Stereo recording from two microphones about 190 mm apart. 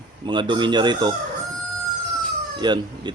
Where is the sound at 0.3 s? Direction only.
25° right (ahead or behind).